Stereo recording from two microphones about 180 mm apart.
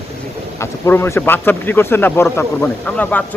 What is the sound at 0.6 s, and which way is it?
Speech, 15° left (ahead or behind).